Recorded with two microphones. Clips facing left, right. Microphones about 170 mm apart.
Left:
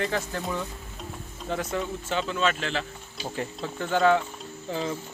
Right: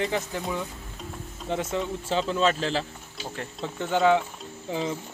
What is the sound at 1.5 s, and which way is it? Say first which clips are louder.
Speech: right 1 dB; 20° right (ahead or behind).